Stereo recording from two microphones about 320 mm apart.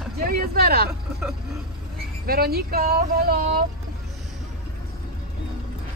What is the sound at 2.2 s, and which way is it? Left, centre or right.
Speech, right.